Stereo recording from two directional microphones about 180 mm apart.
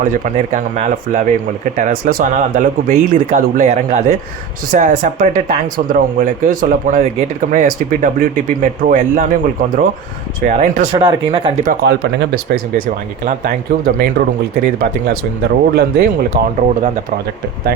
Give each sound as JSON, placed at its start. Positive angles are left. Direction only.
{"t": 0.0, "sound": "speech", "side_deg": -45}
{"t": 10.9, "sound": "speech", "side_deg": -30}
{"t": 11.6, "sound": "speech", "side_deg": -55}